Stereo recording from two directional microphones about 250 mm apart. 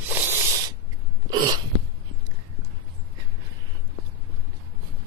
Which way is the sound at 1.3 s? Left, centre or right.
Centre.